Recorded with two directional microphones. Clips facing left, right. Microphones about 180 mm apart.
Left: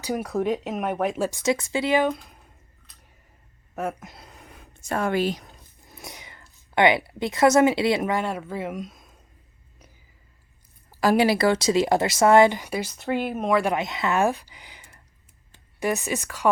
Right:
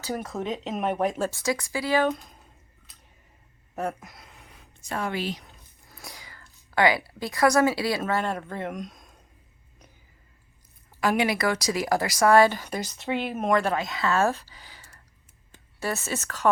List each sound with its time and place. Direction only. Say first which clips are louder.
0.0 s speech: left 5 dB; 15° left (ahead or behind)
0.6 s speech: even; centre (ahead or behind)
1.2 s speech: left 3 dB; 15° left (ahead or behind)
4.0 s a sound: left 4 dB; 30° left (ahead or behind)
5.8 s a sound: left 3 dB; 20° left (ahead or behind)
6.7 s speech: left 3 dB; 20° left (ahead or behind); by 9.1 s centre (ahead or behind)
11.0 s speech: left 5 dB; 35° left (ahead or behind); by 13.6 s centre (ahead or behind)
13.6 s speech: left 2 dB; 15° left (ahead or behind)